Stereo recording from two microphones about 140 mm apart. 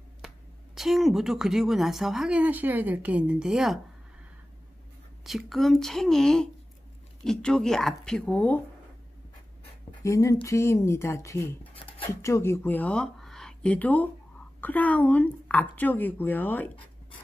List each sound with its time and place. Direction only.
0.7 s speech: centre (ahead or behind)
5.2 s speech: centre (ahead or behind)
10.0 s a woman's voice: 20° left (ahead or behind)